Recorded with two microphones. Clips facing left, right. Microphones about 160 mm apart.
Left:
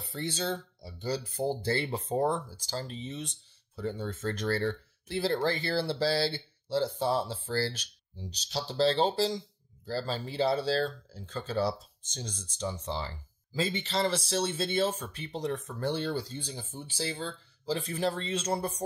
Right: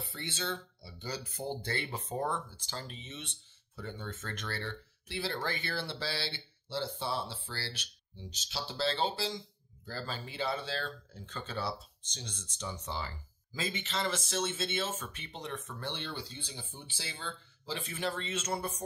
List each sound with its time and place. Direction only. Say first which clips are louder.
0.1 s speech: left 7 dB; 40° left (ahead or behind)